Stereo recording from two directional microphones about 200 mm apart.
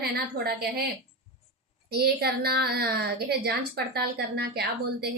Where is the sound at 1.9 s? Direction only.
50° right (ahead or behind).